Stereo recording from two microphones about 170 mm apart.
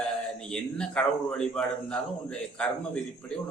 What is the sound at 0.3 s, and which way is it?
A man's voice, 5° left (ahead or behind).